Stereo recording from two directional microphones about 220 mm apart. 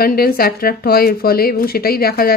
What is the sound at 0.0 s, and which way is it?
Speech, 45° left (ahead or behind).